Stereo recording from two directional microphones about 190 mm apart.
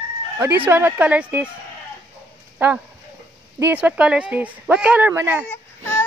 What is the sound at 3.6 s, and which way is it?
Speech, 5° right (ahead or behind).